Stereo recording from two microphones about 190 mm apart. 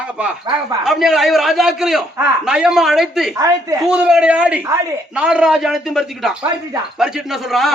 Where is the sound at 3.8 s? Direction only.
5° right (ahead or behind).